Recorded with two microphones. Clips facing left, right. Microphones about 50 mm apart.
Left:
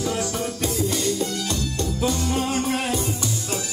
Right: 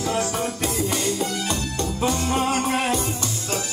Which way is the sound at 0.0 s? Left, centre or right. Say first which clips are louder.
Right 2 dB; right.